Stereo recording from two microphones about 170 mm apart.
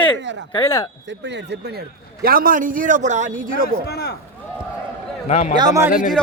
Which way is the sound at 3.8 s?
75° left (ahead or behind).